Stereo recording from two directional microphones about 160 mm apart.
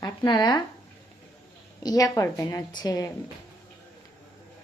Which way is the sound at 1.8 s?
25° left (ahead or behind).